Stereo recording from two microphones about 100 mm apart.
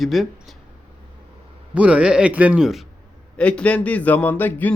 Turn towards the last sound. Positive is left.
turn(degrees=20)  # may be behind; listen again after turning